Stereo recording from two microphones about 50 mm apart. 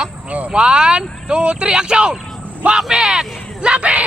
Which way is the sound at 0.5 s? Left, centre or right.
Centre.